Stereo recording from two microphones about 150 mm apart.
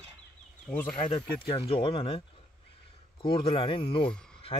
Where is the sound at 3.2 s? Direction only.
35° left (ahead or behind).